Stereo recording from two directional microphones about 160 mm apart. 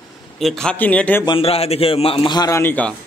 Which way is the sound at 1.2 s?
35° left (ahead or behind).